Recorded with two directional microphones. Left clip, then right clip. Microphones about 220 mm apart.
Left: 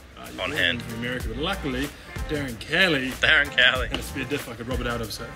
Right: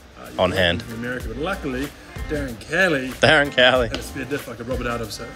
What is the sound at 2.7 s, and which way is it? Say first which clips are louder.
Speech: right 2 dB; 25° right (ahead or behind).